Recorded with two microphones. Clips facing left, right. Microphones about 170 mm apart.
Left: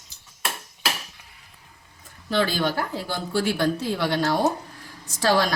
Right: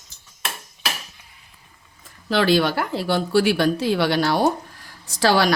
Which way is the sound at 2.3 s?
90° right.